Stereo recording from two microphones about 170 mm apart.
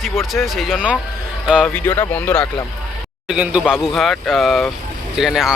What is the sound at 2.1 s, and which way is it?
Speech, 10° left (ahead or behind).